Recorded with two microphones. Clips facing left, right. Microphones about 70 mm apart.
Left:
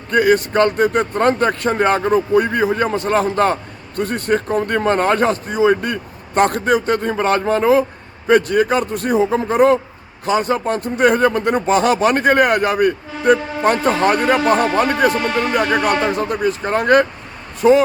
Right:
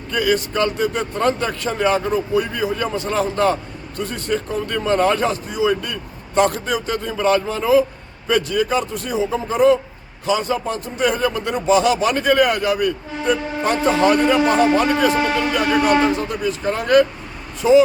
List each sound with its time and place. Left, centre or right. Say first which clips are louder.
0.1 s a man's voice: left 5 dB; left
15.1 s speech: even; centre
16.0 s a man's voice: left 2 dB; left